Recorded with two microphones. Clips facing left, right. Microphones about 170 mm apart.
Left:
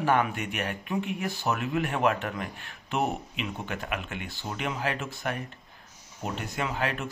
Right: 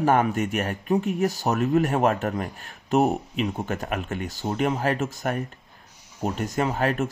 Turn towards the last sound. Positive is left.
turn(degrees=-45)  # may be behind; listen again after turning